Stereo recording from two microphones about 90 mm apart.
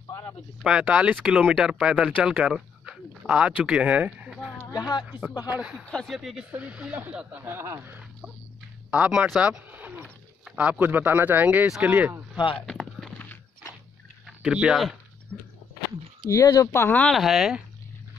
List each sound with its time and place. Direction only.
0.7 s speech: 10° right (ahead or behind)
4.7 s speech: 50° left (ahead or behind)
5.5 s speech: 10° right (ahead or behind)
7.4 s speech: 30° right (ahead or behind)
8.9 s speech: 10° right (ahead or behind)
12.5 s a sound: 5° left (ahead or behind)
14.2 s speech: 10° right (ahead or behind)
15.3 s walk: 5° left (ahead or behind)
16.3 s speech: 40° left (ahead or behind)
16.7 s speech: 25° left (ahead or behind)
17.1 s speech: 5° right (ahead or behind)